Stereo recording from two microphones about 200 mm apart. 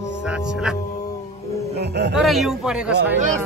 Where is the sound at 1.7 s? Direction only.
55° right (ahead or behind).